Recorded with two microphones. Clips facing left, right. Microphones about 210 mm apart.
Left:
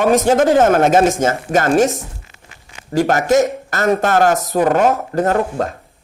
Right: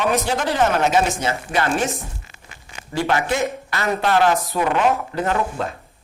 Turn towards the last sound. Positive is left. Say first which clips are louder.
# left 5 dB
turn(degrees=45)  # may be behind; listen again after turning